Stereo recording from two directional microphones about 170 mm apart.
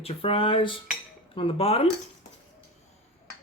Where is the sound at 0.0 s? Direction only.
35° left (ahead or behind).